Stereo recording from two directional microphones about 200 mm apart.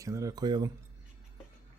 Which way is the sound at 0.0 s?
15° right (ahead or behind).